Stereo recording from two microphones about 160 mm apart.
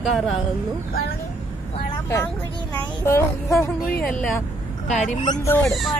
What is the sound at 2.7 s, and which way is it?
Speech, 10° left (ahead or behind).